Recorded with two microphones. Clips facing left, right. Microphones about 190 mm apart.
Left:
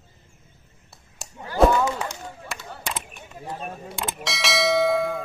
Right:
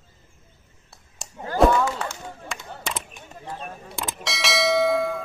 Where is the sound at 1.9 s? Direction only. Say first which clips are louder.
Left 1 dB; 15° left (ahead or behind).